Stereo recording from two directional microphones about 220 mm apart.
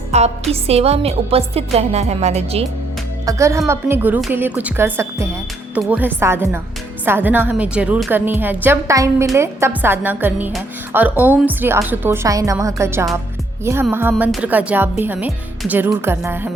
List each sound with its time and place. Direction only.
0.1 s music: 30° right (ahead or behind)
0.5 s speech: 30° right (ahead or behind)
3.2 s a woman's voice: 15° right (ahead or behind)